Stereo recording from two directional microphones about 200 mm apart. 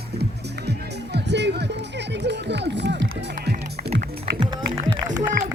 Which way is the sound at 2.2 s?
60° right (ahead or behind).